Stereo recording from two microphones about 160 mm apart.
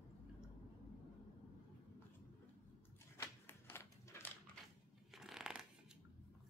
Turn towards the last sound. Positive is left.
turn(degrees=-5)  # may be behind; listen again after turning